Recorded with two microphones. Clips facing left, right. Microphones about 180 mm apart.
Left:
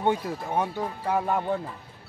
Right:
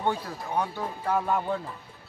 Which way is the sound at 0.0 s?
20° left (ahead or behind).